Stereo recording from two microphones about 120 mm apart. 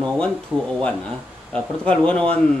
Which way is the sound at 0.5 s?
15° right (ahead or behind).